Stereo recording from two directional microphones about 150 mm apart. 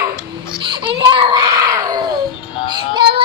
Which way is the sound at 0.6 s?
35° right (ahead or behind).